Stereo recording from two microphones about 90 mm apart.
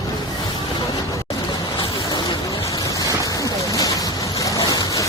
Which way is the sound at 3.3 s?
40° left (ahead or behind).